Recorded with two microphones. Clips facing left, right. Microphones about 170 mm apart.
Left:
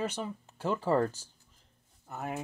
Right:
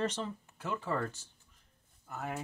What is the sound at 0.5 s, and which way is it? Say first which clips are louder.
Speech: left 8 dB; 35° left (ahead or behind).